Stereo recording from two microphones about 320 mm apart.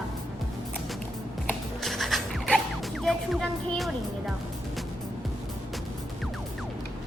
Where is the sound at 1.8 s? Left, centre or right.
Centre.